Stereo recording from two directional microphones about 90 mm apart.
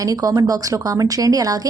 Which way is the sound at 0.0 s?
40° right (ahead or behind).